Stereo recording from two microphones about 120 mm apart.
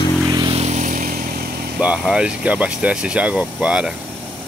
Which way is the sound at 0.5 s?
65° right (ahead or behind).